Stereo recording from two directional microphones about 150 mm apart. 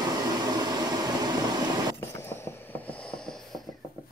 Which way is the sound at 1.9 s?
15° left (ahead or behind).